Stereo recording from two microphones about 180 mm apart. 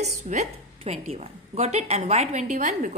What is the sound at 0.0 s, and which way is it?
A woman's voice, 40° right (ahead or behind).